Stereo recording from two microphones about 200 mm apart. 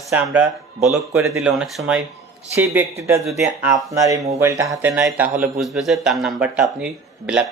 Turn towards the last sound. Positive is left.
turn(degrees=-5)  # may be behind; listen again after turning